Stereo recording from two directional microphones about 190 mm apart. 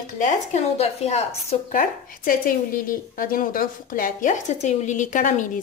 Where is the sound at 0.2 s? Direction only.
35° left (ahead or behind).